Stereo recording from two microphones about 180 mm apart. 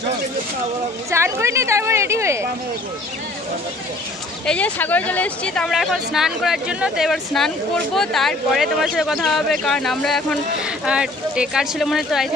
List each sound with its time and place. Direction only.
1.1 s a woman's voice: 15° right (ahead or behind)
4.5 s speech: 5° left (ahead or behind)